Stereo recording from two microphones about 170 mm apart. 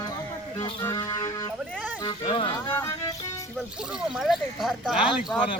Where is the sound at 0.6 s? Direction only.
20° left (ahead or behind).